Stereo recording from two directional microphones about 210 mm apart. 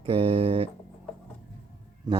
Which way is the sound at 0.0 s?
25° right (ahead or behind).